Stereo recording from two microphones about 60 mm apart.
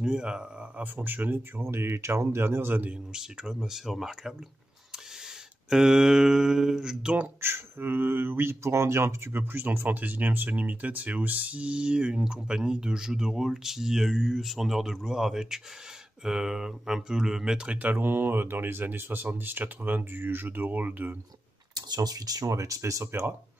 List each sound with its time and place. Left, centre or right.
0.0 s speech: centre; by 1.4 s right
1.6 s speech: right
2.9 s speech: centre
5.7 s speech: centre
7.3 s speech: right
8.6 s speech: right; by 17.9 s centre
17.9 s speech: right
21.7 s speech: right